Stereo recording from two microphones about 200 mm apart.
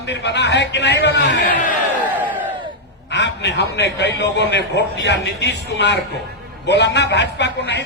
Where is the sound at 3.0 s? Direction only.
60° left (ahead or behind).